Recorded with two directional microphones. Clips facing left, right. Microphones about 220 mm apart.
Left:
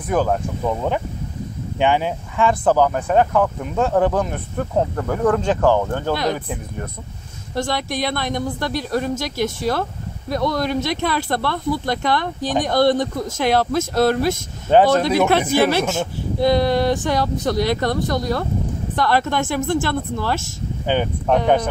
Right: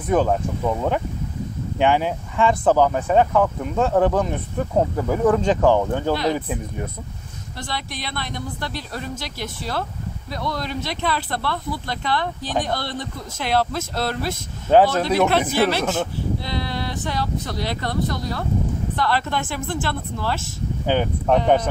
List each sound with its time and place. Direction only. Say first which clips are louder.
0.1 s speech: even; centre (ahead or behind)
7.5 s a woman's voice: left 9 dB; 45° left (ahead or behind)
12.4 s speech: left 4 dB; 15° left (ahead or behind)
12.6 s a woman's voice: left 11 dB; 45° left (ahead or behind)
14.7 s speech: left 2 dB; 5° right (ahead or behind)
15.8 s speech: left 1 dB; 10° left (ahead or behind)
16.3 s a woman's voice: left 11 dB; 45° left (ahead or behind)
20.8 s speech: left 1 dB; centre (ahead or behind)